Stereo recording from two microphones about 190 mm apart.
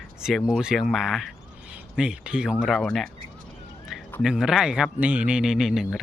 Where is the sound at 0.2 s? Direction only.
Centre (ahead or behind).